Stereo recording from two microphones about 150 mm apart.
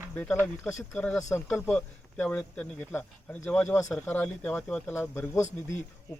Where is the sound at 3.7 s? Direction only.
20° left (ahead or behind).